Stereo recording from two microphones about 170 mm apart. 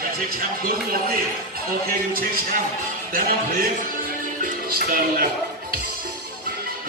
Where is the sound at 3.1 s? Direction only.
55° right (ahead or behind).